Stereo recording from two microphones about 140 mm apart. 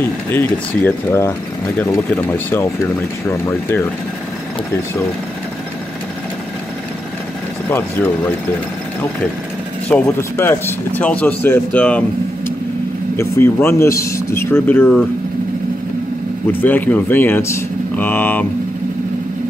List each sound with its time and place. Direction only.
0.0 s speech: 15° left (ahead or behind)
7.7 s speech: 15° left (ahead or behind)
10.0 s speech: 20° left (ahead or behind)
13.1 s speech: 15° left (ahead or behind)
16.6 s speech: 15° left (ahead or behind)